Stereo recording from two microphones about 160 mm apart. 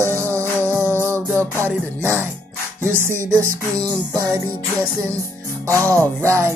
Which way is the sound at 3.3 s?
20° right (ahead or behind).